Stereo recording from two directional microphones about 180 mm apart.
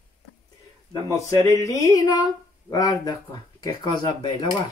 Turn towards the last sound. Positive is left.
turn(degrees=25)  # may be behind; listen again after turning